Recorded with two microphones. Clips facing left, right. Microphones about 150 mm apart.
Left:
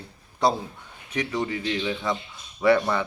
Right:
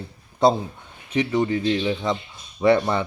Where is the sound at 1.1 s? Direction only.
25° right (ahead or behind).